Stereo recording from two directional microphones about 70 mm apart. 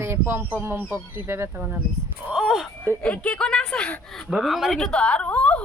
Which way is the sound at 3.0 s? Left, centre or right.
Centre.